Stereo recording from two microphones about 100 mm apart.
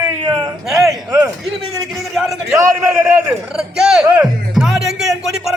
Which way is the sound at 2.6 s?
25° right (ahead or behind).